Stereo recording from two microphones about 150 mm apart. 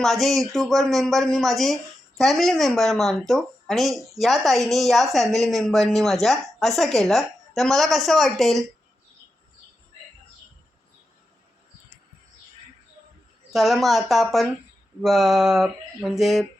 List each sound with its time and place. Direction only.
0.0 s speech: centre (ahead or behind)
13.5 s speech: centre (ahead or behind)